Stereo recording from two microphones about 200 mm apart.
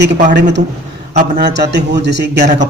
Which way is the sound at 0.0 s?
55° right (ahead or behind).